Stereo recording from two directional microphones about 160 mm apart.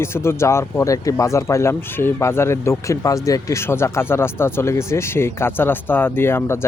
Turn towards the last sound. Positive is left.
turn(degrees=15)  # may be behind; listen again after turning